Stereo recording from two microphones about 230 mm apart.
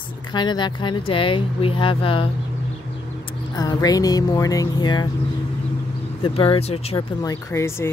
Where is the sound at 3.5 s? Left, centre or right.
Centre.